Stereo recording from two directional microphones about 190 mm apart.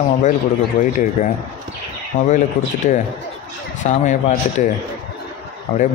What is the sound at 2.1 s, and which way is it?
Speech, 45° left (ahead or behind).